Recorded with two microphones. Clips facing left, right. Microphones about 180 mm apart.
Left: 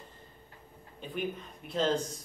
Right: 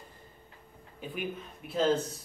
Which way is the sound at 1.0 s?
5° right (ahead or behind).